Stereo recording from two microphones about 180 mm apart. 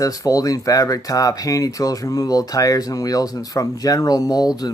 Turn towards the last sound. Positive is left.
turn(degrees=20)  # may be behind; listen again after turning